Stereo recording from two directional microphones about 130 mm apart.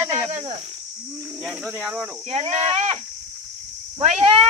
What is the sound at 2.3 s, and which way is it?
Speech, 55° right (ahead or behind).